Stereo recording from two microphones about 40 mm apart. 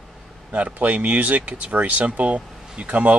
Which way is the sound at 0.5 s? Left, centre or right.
Right.